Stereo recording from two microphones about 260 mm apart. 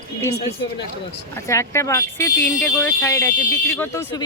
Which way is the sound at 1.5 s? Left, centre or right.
Centre.